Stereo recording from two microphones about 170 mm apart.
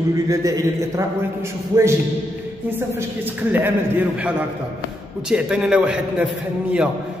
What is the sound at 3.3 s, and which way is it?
A man's voice, 10° right (ahead or behind).